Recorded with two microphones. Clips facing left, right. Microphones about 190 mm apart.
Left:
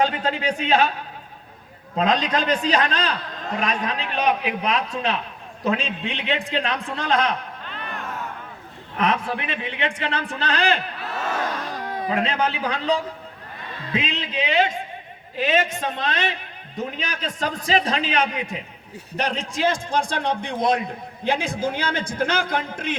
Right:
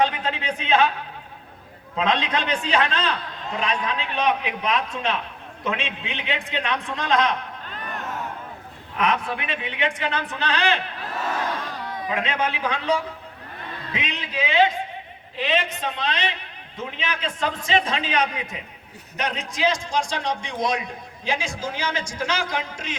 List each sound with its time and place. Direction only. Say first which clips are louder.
0.0 s a man's voice: left 2 dB; 35° left (ahead or behind)
2.0 s a man's voice: left 2 dB; 40° left (ahead or behind)
7.7 s a sound: left 1 dB; 40° right (ahead or behind)
9.0 s a man's voice: left 1 dB; 30° left (ahead or behind)
13.9 s a man's voice: left 4 dB; 30° left (ahead or behind)
15.4 s a man's voice: left 3 dB; 45° left (ahead or behind)
19.6 s a man's voice: left 1 dB; 55° left (ahead or behind)